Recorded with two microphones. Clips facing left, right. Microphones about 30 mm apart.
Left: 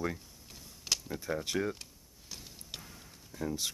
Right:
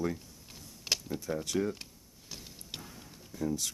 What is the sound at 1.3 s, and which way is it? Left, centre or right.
Speech, centre.